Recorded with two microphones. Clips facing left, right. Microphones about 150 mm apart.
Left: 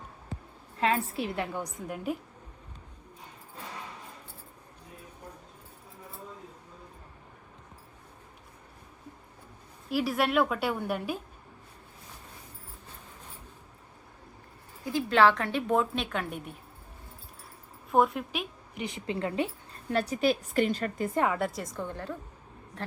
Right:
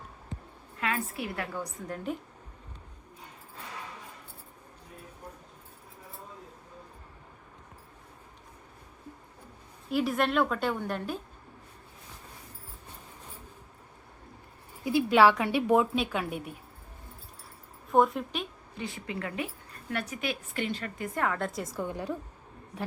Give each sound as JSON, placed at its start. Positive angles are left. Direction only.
{"t": 0.8, "sound": "a woman's voice", "side_deg": 30}
{"t": 9.9, "sound": "a woman's voice", "side_deg": 5}
{"t": 14.8, "sound": "a woman's voice", "side_deg": -10}
{"t": 17.9, "sound": "a woman's voice", "side_deg": 0}
{"t": 18.7, "sound": "a woman's voice", "side_deg": 20}
{"t": 21.3, "sound": "a woman's voice", "side_deg": 5}